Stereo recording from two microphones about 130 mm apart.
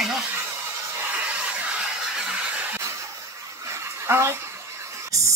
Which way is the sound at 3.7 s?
20° right (ahead or behind).